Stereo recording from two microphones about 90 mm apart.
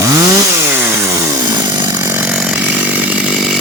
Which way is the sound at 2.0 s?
20° right (ahead or behind).